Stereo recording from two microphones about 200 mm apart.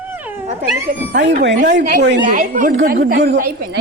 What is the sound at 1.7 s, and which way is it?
Speech, 45° right (ahead or behind).